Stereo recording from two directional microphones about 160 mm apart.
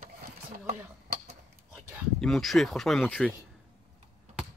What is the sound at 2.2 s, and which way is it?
A man's voice, centre (ahead or behind).